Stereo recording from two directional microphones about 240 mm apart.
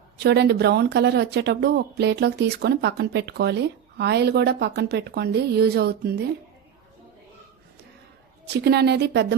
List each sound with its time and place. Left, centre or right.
0.2 s speech: right
8.4 s speech: right